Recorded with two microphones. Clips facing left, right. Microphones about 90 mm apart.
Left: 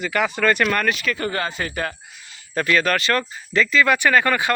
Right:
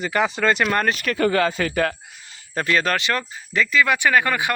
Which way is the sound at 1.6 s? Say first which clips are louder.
Right 5 dB; 90° right.